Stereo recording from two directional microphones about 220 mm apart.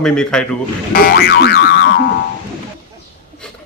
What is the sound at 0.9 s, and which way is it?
Boing, 45° left (ahead or behind).